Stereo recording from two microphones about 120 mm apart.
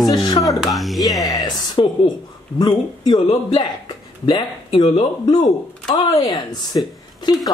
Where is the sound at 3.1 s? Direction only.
40° left (ahead or behind).